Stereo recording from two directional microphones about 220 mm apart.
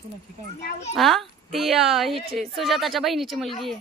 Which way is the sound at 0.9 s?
Centre (ahead or behind).